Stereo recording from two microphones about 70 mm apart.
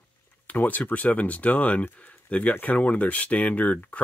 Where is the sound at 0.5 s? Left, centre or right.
Left.